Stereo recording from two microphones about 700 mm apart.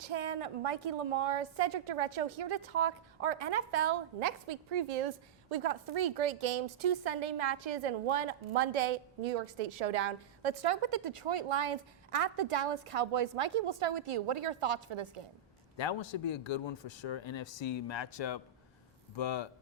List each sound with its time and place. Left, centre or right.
0.0 s a woman's voice: right
15.8 s speech: left